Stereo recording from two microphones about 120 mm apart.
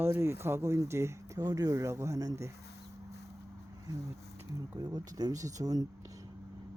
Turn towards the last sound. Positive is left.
turn(degrees=-30)  # may be behind; listen again after turning